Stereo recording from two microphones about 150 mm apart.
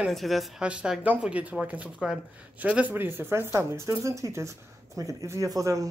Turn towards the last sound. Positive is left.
turn(degrees=-20)  # may be behind; listen again after turning